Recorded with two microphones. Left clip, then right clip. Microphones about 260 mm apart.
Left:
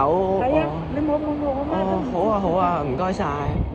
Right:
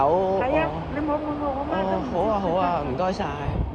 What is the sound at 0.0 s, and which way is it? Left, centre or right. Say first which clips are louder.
Vehicle: left 1 dB; right.